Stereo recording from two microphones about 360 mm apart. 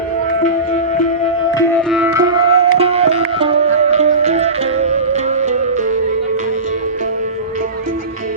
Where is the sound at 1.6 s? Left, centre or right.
Centre.